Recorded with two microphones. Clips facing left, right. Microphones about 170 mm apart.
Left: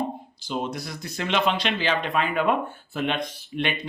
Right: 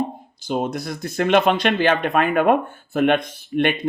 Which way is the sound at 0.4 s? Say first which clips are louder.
Right 6 dB; 50° right (ahead or behind).